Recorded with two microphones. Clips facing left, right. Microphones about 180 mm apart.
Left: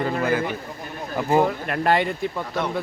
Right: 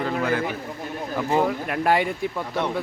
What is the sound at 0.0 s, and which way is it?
A man's voice, 5° left (ahead or behind).